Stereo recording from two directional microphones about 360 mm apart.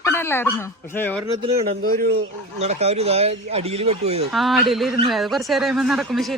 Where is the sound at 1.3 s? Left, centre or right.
Centre.